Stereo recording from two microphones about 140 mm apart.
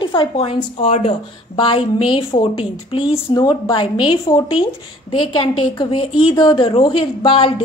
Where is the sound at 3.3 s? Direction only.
30° left (ahead or behind).